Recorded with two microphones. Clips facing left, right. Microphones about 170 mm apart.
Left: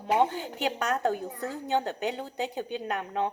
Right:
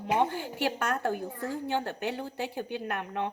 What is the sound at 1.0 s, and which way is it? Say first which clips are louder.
A woman's voice: left 2 dB; 20° left (ahead or behind).